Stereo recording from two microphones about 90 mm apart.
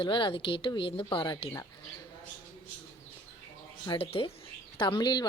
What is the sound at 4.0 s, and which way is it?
Speech, 90° left.